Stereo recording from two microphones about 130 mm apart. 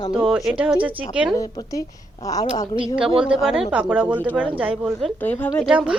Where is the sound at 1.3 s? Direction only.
25° left (ahead or behind).